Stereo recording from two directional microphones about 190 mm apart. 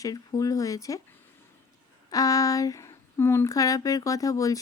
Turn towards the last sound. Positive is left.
turn(degrees=15)  # may be behind; listen again after turning